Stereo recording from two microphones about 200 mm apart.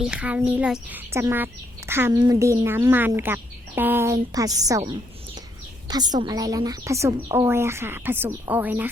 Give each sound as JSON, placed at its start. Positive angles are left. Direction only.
{"t": 0.0, "sound": "a woman's voice", "side_deg": -5}
{"t": 5.9, "sound": "a woman's voice", "side_deg": -20}